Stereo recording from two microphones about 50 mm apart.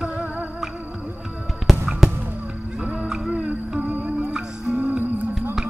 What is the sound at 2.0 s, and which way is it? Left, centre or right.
Music, centre.